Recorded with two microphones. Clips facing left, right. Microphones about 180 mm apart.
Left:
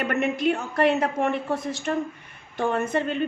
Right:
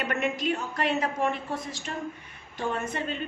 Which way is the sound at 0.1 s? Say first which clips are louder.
Left 5 dB; 60° left (ahead or behind).